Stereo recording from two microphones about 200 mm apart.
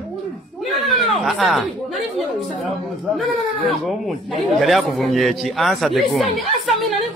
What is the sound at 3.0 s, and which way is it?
Speech, centre (ahead or behind).